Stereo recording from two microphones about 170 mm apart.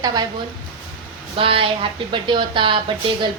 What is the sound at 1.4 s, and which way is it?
A woman's voice, 30° right (ahead or behind).